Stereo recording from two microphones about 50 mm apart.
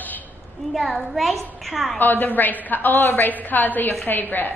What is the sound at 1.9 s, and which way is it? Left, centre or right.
A woman's voice, left.